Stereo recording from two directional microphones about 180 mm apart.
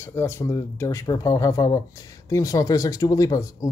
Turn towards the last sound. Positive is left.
turn(degrees=20)  # may be behind; listen again after turning